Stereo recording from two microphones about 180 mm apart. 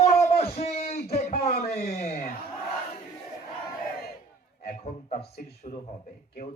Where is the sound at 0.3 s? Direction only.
35° left (ahead or behind).